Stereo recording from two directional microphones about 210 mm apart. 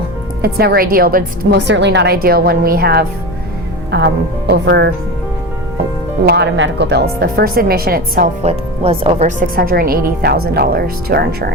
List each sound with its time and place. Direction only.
0.4 s speech: 50° right (ahead or behind)
6.2 s speech: 55° right (ahead or behind)
8.4 s speech: 25° right (ahead or behind); by 11.5 s 50° right (ahead or behind)